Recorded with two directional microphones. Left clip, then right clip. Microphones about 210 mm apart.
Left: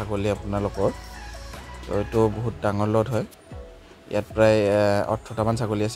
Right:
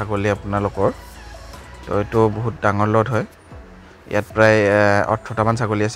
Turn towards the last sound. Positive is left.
turn(degrees=-20)  # may be behind; listen again after turning